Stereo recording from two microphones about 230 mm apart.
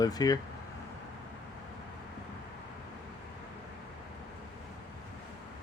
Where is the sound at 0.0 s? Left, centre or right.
Centre.